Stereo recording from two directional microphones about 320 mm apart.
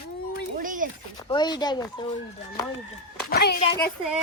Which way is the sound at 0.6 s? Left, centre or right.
Right.